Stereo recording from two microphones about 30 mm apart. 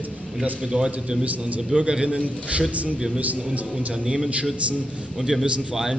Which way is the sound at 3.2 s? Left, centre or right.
Right.